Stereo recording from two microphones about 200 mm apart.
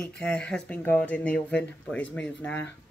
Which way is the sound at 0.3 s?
5° left (ahead or behind).